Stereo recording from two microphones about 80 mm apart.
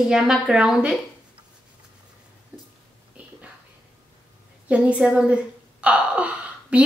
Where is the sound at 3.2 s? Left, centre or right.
Centre.